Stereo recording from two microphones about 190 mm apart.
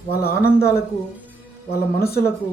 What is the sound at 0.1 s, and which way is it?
Speech, 55° left (ahead or behind).